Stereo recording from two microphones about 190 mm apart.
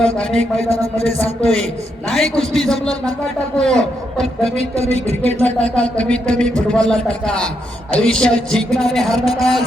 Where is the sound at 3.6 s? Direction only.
5° left (ahead or behind).